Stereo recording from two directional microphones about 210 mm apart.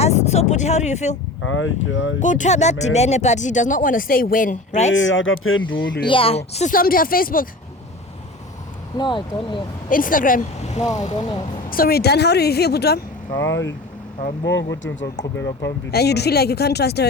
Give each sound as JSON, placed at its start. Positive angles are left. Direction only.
{"t": 0.0, "sound": "speech", "side_deg": 30}
{"t": 1.4, "sound": "speech", "side_deg": 70}
{"t": 2.2, "sound": "speech", "side_deg": 35}
{"t": 4.9, "sound": "speech", "side_deg": 65}
{"t": 6.1, "sound": "speech", "side_deg": 25}
{"t": 9.0, "sound": "speech", "side_deg": 20}
{"t": 9.9, "sound": "speech", "side_deg": 40}
{"t": 11.1, "sound": "speech", "side_deg": 20}
{"t": 11.7, "sound": "speech", "side_deg": 45}
{"t": 13.4, "sound": "speech", "side_deg": 60}
{"t": 15.2, "sound": "speech", "side_deg": 15}
{"t": 15.6, "sound": "speech", "side_deg": 50}